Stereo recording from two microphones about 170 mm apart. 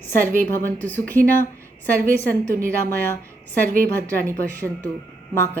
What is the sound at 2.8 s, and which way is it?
Speech, 10° left (ahead or behind).